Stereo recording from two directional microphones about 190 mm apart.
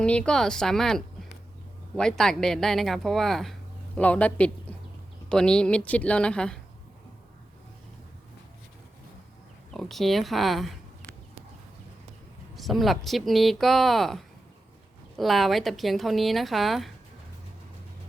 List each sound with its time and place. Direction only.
0.0 s a woman's voice: 5° left (ahead or behind)
9.7 s a woman's voice: centre (ahead or behind)
12.5 s a woman's voice: centre (ahead or behind)